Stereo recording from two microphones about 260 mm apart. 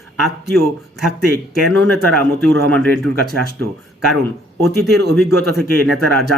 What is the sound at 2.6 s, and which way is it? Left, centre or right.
Speech, centre.